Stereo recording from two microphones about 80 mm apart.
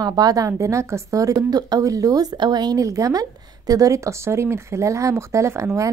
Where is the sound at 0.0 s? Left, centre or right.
Right.